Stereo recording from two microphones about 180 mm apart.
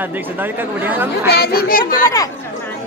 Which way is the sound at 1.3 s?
60° left (ahead or behind).